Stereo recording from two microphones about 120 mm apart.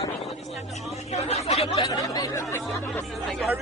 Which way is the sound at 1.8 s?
30° left (ahead or behind).